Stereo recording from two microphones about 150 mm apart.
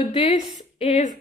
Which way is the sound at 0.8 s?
45° left (ahead or behind).